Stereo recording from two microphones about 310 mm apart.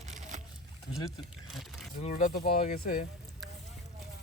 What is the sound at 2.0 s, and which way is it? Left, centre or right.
Speech, left.